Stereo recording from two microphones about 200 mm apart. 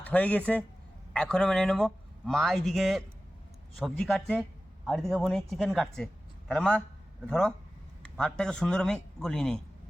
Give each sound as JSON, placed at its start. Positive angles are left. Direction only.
{"t": 0.0, "sound": "speech", "side_deg": 5}